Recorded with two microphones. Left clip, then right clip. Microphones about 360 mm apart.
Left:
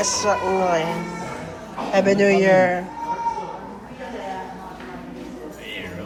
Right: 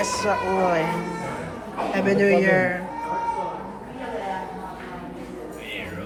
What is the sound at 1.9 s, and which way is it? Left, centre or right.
Speech, centre.